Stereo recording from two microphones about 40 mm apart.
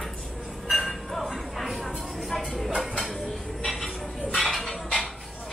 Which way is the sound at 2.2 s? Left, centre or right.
Centre.